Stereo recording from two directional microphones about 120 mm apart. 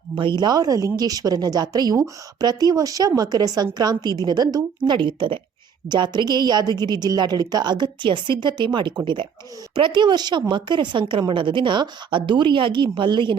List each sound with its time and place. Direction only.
0.2 s a woman's voice: 40° right (ahead or behind)